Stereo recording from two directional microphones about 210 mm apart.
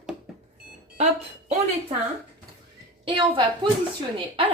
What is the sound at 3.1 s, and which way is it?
Speech, 25° right (ahead or behind).